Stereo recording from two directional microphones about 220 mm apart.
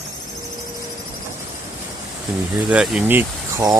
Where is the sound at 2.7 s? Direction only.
5° right (ahead or behind).